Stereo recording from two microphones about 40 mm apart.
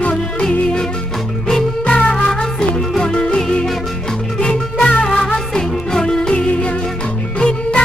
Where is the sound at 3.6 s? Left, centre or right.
Centre.